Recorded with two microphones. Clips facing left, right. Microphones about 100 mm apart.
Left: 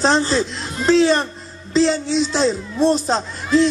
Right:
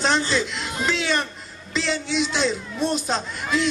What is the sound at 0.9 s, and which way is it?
A child's voice, 35° left (ahead or behind).